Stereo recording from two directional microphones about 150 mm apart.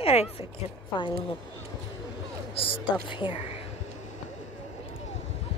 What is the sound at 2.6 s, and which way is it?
Speech, 35° left (ahead or behind).